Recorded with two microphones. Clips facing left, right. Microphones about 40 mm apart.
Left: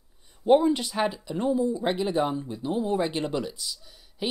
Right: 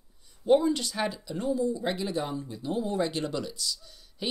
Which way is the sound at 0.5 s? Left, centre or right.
Left.